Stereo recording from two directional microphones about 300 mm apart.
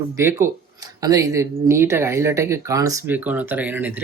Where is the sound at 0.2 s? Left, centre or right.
Centre.